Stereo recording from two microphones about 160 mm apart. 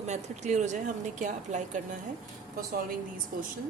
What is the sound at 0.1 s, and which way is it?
A woman's voice, 45° right (ahead or behind).